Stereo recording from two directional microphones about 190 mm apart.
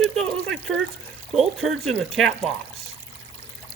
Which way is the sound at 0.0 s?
Centre (ahead or behind).